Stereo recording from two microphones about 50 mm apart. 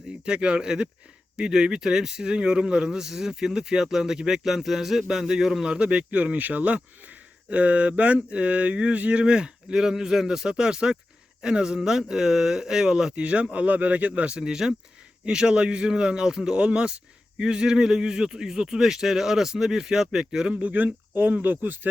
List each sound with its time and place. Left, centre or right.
0.3 s a man's voice: centre
5.6 s a man's voice: centre
13.2 s a man's voice: right
20.5 s speech: right